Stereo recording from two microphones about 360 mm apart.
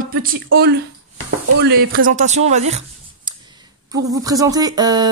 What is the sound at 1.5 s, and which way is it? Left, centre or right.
Speech, right.